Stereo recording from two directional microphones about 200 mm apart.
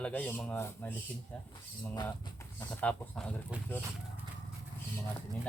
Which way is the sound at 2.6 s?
5° left (ahead or behind).